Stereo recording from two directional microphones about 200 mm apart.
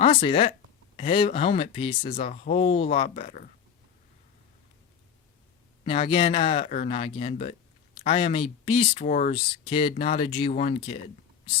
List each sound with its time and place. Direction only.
0.0 s speech: 25° left (ahead or behind)
5.8 s speech: 25° left (ahead or behind)
9.3 s speech: 25° left (ahead or behind)